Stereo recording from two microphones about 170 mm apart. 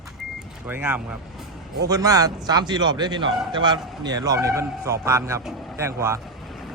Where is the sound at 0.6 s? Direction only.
10° right (ahead or behind).